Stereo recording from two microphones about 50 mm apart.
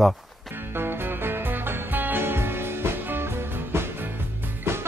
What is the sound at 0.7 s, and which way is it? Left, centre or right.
Music, right.